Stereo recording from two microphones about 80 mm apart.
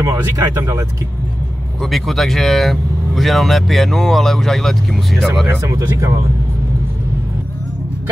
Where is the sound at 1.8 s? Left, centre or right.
Centre.